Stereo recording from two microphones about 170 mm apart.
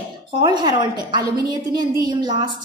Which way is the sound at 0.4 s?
25° right (ahead or behind).